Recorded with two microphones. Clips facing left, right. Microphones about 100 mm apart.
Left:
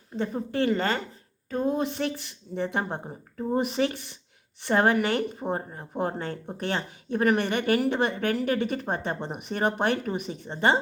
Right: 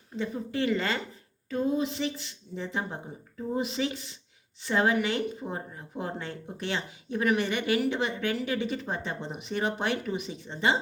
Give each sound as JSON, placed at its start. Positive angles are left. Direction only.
{"t": 0.2, "sound": "speech", "side_deg": 50}